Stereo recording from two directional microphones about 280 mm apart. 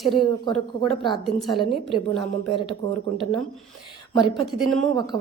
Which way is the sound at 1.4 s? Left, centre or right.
Centre.